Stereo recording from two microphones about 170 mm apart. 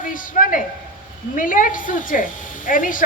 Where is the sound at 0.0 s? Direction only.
50° left (ahead or behind).